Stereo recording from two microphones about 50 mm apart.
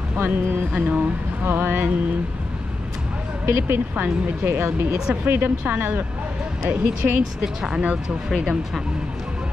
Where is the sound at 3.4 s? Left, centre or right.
Right.